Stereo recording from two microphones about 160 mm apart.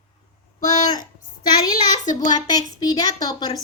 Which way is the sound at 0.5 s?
50° left (ahead or behind).